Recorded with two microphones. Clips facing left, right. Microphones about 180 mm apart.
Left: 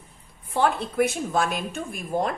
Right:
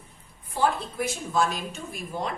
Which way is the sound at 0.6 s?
65° left (ahead or behind).